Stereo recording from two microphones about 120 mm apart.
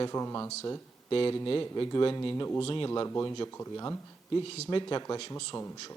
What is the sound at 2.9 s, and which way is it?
Speech, 25° left (ahead or behind).